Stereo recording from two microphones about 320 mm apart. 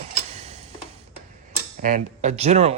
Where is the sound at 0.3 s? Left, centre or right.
Centre.